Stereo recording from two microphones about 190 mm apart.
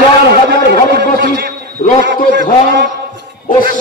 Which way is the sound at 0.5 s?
55° right (ahead or behind).